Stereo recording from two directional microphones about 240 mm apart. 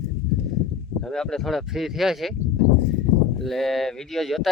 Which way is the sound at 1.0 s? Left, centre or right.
Centre.